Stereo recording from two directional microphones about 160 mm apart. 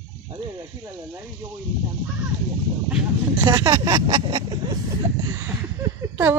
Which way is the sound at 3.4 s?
25° right (ahead or behind).